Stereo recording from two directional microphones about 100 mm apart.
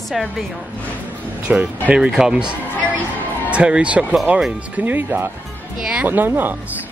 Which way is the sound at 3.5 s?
10° right (ahead or behind).